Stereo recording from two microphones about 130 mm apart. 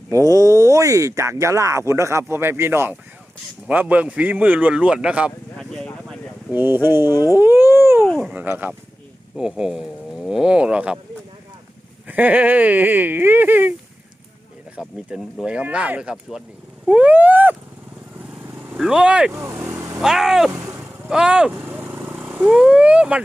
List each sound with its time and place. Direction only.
0.1 s speech: 25° right (ahead or behind); by 5.3 s 10° right (ahead or behind)
5.5 s a sound: 5° left (ahead or behind)
6.5 s speech: 15° right (ahead or behind)
7.1 s speech: 30° left (ahead or behind)
7.3 s a sound: 15° right (ahead or behind)
8.0 s dog: centre (ahead or behind)
8.4 s speech: 15° right (ahead or behind)
12.0 s speech: 15° right (ahead or behind)
14.8 s speech: 5° right (ahead or behind)
18.7 s speech: 5° right (ahead or behind)
19.3 s speech: 20° right (ahead or behind)
20.0 s speech: 5° right (ahead or behind)
20.5 s vehicle: 20° right (ahead or behind)
21.1 s speech: 5° right (ahead or behind)